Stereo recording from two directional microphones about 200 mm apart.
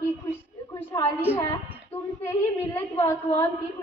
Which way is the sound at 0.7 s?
15° left (ahead or behind).